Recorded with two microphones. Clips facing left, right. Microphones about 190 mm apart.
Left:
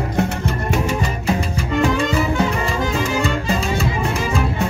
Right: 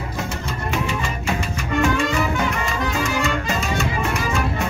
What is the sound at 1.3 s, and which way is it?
Music, 35° left (ahead or behind).